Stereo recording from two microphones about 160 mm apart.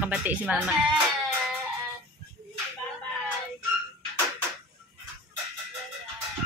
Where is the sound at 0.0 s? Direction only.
10° right (ahead or behind).